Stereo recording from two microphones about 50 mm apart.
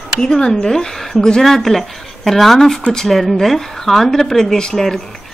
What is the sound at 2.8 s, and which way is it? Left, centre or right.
Speech, centre.